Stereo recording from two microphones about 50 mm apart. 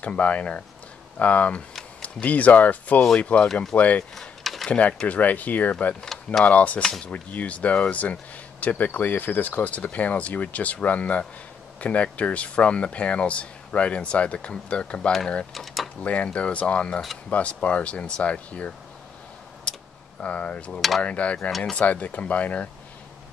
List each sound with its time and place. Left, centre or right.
0.0 s speech: left
4.1 s a sound: centre
4.6 s speech: left
15.5 s a sound: centre
16.0 s speech: left
20.2 s speech: left
21.5 s speech: centre
21.7 s speech: left